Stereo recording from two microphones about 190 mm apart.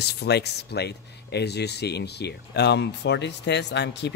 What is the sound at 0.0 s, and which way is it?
Speech, 60° left (ahead or behind).